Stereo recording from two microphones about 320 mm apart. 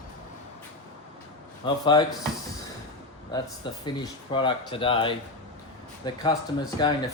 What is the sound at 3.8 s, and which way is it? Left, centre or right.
Speech, centre.